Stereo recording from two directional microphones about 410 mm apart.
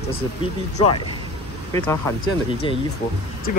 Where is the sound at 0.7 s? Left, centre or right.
Centre.